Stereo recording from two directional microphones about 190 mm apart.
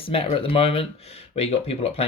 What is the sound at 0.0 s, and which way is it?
Speech, 30° left (ahead or behind).